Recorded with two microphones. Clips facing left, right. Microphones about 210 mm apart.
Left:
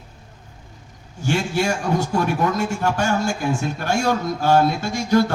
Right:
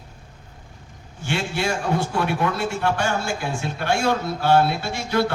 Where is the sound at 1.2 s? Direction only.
40° left (ahead or behind).